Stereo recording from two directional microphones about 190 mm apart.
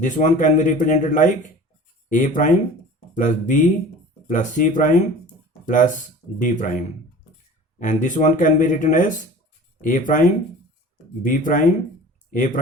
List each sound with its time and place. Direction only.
0.0 s speech: 40° left (ahead or behind)
7.8 s speech: 40° left (ahead or behind)